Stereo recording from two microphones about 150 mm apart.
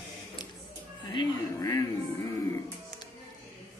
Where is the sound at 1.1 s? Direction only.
20° left (ahead or behind).